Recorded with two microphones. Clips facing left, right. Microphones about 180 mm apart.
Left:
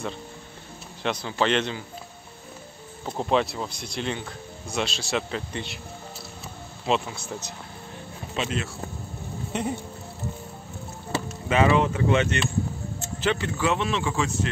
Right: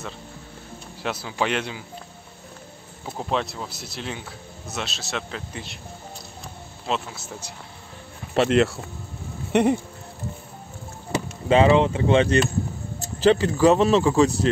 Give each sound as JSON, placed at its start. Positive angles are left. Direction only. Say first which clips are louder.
{"t": 1.0, "sound": "speech", "louder": "left 1 dB", "side_deg": -5}
{"t": 3.1, "sound": "speech", "louder": "left 3 dB", "side_deg": 0}
{"t": 6.9, "sound": "speech", "louder": "left 3 dB", "side_deg": 0}
{"t": 8.4, "sound": "speech", "louder": "right 11 dB", "side_deg": -70}
{"t": 11.4, "sound": "speech", "louder": "right 4 dB", "side_deg": -30}